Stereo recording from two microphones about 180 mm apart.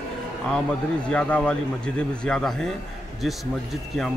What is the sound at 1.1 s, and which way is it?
A man's voice, 5° left (ahead or behind).